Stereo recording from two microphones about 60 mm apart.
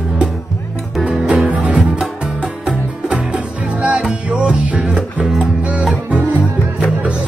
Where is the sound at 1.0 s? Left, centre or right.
Centre.